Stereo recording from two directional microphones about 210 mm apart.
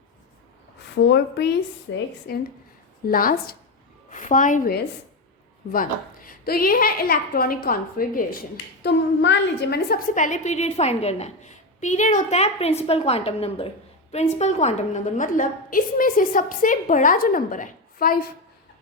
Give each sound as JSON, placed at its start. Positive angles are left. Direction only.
{"t": 1.0, "sound": "speech", "side_deg": 55}
{"t": 1.9, "sound": "a woman's voice", "side_deg": 65}
{"t": 2.3, "sound": "a woman's voice", "side_deg": 45}
{"t": 8.8, "sound": "a woman's voice", "side_deg": 55}